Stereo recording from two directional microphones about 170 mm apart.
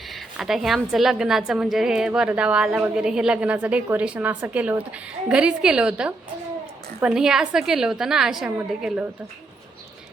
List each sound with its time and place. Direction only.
0.1 s a woman's voice: centre (ahead or behind)